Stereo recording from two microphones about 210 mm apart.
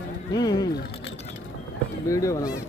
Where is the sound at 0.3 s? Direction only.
20° left (ahead or behind).